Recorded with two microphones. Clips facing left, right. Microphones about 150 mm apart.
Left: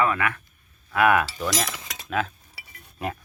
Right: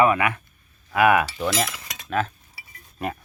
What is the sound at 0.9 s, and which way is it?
Speech, 5° right (ahead or behind).